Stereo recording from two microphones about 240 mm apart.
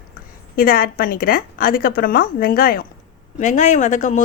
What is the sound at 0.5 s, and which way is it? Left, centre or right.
A woman's voice, left.